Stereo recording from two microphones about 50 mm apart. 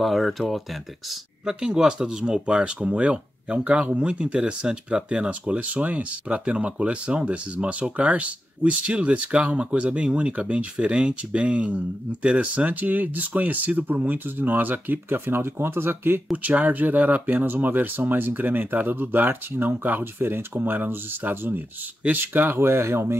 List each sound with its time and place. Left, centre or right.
0.0 s speech: centre
1.4 s speech: centre; by 16.2 s right
16.4 s speech: right
22.6 s speech: right